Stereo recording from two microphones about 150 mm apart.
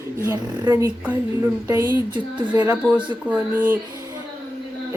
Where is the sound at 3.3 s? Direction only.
15° right (ahead or behind).